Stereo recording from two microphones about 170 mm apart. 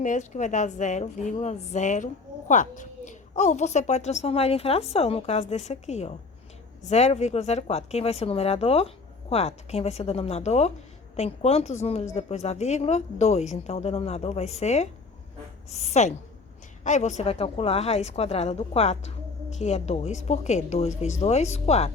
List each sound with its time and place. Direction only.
0.0 s a woman's voice: 45° left (ahead or behind)